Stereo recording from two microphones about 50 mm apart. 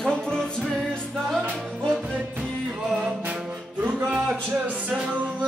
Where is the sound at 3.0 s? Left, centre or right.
Right.